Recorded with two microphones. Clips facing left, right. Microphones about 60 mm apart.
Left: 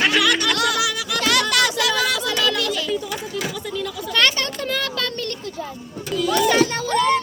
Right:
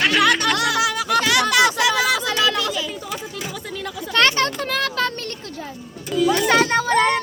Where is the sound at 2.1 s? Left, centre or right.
Right.